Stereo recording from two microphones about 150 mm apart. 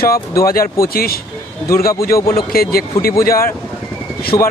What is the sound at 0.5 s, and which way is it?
Speech, 75° left (ahead or behind).